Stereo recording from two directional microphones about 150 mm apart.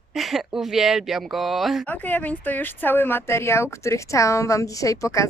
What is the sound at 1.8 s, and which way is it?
Speech, 10° left (ahead or behind).